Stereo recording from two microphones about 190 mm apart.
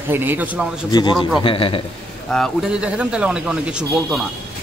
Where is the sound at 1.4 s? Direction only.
30° left (ahead or behind).